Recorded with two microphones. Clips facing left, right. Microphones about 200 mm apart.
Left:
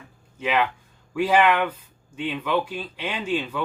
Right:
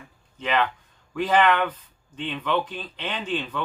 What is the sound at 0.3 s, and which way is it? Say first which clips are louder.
Speech: left 1 dB; 10° left (ahead or behind).